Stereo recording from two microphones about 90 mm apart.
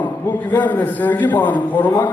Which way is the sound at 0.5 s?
25° left (ahead or behind).